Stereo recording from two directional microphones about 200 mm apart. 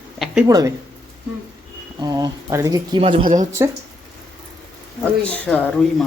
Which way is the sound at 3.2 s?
40° right (ahead or behind).